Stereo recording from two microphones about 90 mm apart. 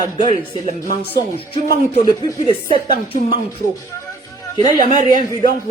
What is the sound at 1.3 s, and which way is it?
Speech, 80° left.